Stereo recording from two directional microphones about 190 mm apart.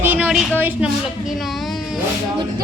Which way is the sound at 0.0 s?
10° right (ahead or behind).